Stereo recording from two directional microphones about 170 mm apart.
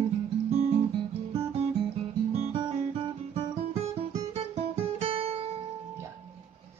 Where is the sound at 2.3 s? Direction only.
40° right (ahead or behind).